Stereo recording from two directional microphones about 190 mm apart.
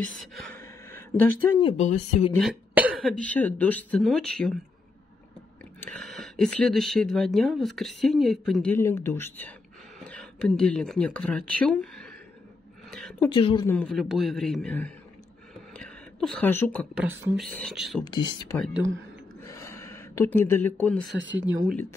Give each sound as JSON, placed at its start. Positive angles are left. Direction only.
{"t": 0.6, "sound": "a sound", "side_deg": 10}
{"t": 1.6, "sound": "speech", "side_deg": 25}
{"t": 2.7, "sound": "speech", "side_deg": -10}
{"t": 5.8, "sound": "speech", "side_deg": 0}
{"t": 8.7, "sound": "speech", "side_deg": 15}
{"t": 13.3, "sound": "speech", "side_deg": 30}
{"t": 13.7, "sound": "speech", "side_deg": 5}
{"t": 15.7, "sound": "a sound", "side_deg": 5}
{"t": 16.9, "sound": "speech", "side_deg": -10}
{"t": 18.0, "sound": "speech", "side_deg": 25}
{"t": 19.4, "sound": "a sound", "side_deg": 15}
{"t": 21.1, "sound": "speech", "side_deg": -70}